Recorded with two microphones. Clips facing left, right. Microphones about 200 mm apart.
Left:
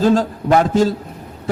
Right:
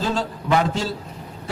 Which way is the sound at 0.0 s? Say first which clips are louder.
Left 10 dB; 45° left (ahead or behind).